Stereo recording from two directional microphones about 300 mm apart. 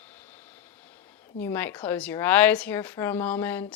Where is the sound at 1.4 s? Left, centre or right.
Centre.